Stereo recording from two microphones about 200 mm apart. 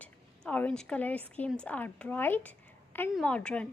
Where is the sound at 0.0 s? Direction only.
5° left (ahead or behind).